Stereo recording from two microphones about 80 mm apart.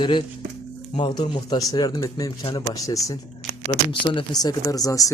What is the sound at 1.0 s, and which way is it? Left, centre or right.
Speech, left.